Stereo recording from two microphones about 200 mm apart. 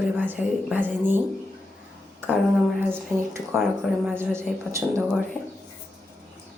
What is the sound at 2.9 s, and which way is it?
Speech, 10° right (ahead or behind).